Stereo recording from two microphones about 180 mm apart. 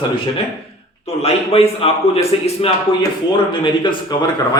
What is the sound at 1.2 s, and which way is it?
A man's voice, 35° left (ahead or behind).